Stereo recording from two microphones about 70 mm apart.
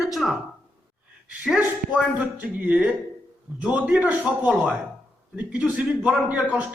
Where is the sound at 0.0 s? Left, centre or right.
Centre.